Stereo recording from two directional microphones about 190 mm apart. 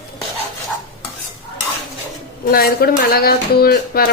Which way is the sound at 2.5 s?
55° left (ahead or behind).